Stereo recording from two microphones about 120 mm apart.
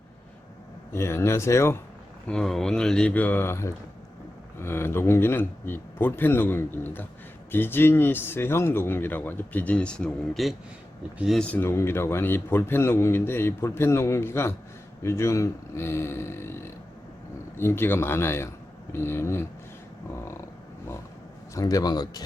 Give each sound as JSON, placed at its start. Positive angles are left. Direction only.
{"t": 0.9, "sound": "a man's voice", "side_deg": 20}
{"t": 2.2, "sound": "a man's voice", "side_deg": 5}
{"t": 21.5, "sound": "a man's voice", "side_deg": 30}